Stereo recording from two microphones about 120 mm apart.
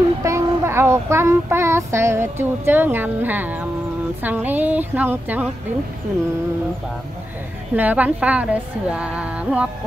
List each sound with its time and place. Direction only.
0.2 s a woman's voice: 20° right (ahead or behind)
7.7 s a woman's voice: 15° right (ahead or behind)